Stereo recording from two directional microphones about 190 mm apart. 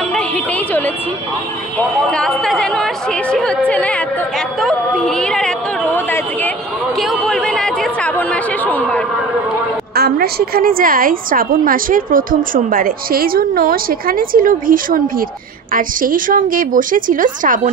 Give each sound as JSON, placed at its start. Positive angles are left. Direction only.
{"t": 0.1, "sound": "a woman's voice", "side_deg": 5}
{"t": 7.0, "sound": "chatter", "side_deg": 0}
{"t": 9.9, "sound": "a woman's voice", "side_deg": -55}